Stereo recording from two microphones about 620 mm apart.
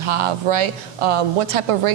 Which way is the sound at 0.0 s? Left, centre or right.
Right.